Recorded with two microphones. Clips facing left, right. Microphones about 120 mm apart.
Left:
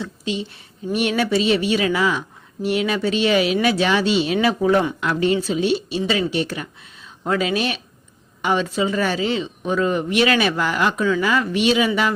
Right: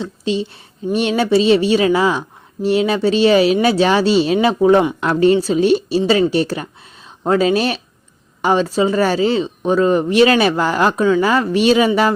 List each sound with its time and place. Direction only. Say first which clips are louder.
0.0 s speech: right 6 dB; 30° right (ahead or behind)
4.9 s speech: right 6 dB; 40° right (ahead or behind)